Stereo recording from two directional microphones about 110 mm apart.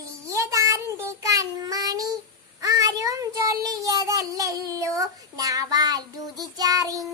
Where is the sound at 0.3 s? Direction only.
30° right (ahead or behind).